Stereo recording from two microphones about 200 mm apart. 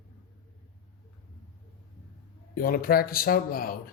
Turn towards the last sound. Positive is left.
turn(degrees=45)  # may be behind; listen again after turning